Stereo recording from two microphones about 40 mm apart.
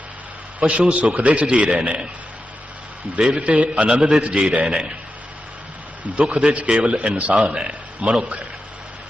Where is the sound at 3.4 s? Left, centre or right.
Right.